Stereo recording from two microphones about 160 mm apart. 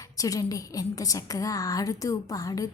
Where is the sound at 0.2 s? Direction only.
20° left (ahead or behind).